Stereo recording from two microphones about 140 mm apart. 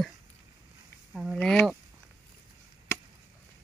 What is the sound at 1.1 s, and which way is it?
Speech, 5° right (ahead or behind).